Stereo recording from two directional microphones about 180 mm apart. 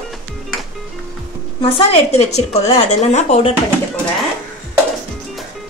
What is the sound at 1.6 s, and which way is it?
A woman's voice, 35° left (ahead or behind).